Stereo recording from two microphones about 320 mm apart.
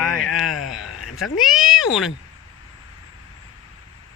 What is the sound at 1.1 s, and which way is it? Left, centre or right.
Speech, centre.